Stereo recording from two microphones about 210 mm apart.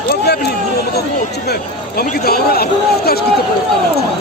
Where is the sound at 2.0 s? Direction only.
45° left (ahead or behind).